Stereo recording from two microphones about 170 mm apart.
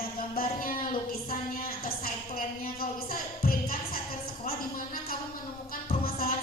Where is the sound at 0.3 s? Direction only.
55° left (ahead or behind).